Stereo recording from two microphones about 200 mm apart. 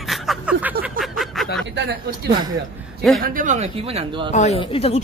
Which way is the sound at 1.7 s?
50° right (ahead or behind).